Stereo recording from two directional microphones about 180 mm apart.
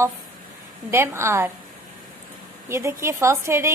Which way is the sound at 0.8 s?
15° right (ahead or behind).